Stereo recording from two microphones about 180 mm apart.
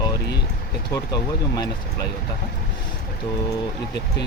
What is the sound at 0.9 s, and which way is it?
Speech, 20° left (ahead or behind).